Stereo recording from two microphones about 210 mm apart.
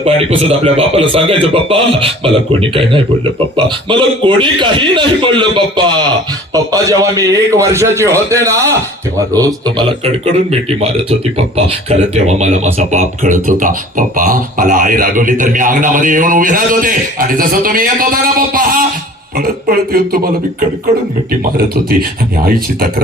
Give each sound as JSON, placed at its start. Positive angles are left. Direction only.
{"t": 0.0, "sound": "a man's voice", "side_deg": -30}
{"t": 11.3, "sound": "speech", "side_deg": -30}
{"t": 22.4, "sound": "speech", "side_deg": -45}